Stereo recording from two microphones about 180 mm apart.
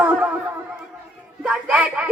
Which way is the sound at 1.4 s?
5° right (ahead or behind).